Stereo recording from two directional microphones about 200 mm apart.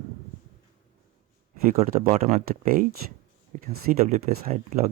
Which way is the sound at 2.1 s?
35° right (ahead or behind).